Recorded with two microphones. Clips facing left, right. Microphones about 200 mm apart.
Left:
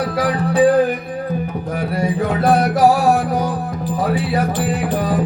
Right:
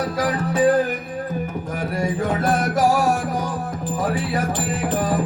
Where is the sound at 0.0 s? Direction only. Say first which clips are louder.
Left 3 dB; 45° right (ahead or behind).